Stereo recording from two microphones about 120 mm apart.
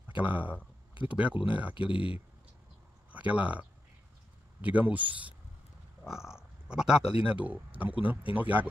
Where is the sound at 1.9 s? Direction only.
45° left (ahead or behind).